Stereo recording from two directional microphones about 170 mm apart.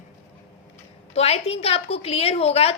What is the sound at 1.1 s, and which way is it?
A woman's voice, 40° left (ahead or behind).